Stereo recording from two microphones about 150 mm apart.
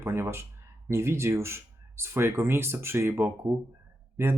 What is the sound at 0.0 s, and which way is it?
Speech, 15° right (ahead or behind).